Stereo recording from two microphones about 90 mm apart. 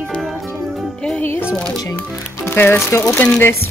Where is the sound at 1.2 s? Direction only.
25° left (ahead or behind).